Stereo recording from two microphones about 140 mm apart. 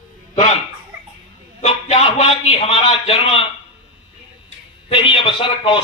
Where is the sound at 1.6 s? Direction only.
45° left (ahead or behind).